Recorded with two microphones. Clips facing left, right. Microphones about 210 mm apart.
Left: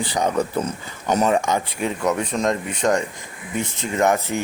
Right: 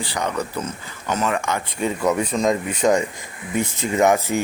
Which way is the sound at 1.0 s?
40° left (ahead or behind).